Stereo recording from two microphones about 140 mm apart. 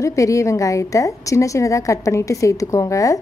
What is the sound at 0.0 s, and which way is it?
A woman's voice, 20° left (ahead or behind).